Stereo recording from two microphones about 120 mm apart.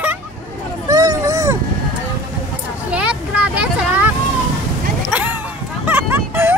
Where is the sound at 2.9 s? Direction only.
10° right (ahead or behind).